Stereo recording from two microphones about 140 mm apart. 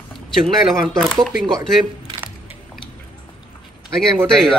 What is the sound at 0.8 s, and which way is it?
Speech, 5° left (ahead or behind).